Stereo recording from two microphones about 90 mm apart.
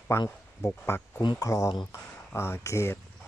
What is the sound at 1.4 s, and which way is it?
Bird, 35° left (ahead or behind).